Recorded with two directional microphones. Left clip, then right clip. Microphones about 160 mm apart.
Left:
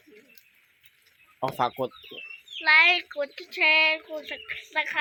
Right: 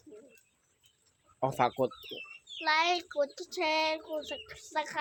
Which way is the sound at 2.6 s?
15° right (ahead or behind).